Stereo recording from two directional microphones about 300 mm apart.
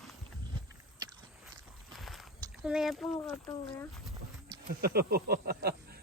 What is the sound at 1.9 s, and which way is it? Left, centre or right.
Boat, centre.